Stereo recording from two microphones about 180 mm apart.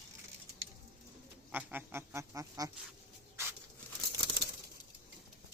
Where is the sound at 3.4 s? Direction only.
15° right (ahead or behind).